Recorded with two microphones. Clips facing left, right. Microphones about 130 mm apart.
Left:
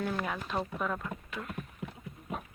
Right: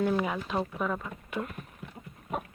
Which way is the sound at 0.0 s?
5° right (ahead or behind).